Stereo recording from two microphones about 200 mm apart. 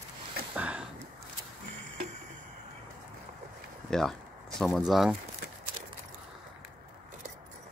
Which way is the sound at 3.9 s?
Centre (ahead or behind).